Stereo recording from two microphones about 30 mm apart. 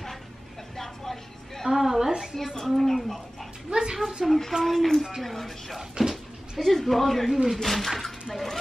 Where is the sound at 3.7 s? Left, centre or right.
Centre.